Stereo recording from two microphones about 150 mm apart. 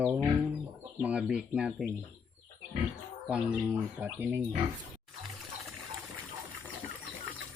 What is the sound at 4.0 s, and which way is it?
Speech, 10° right (ahead or behind).